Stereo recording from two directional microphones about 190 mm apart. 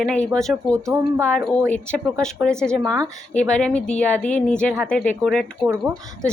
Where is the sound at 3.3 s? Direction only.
5° left (ahead or behind).